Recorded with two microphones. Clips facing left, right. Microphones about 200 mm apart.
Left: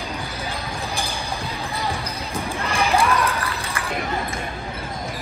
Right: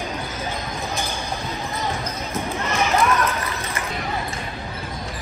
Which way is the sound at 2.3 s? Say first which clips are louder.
Even; 30° left (ahead or behind).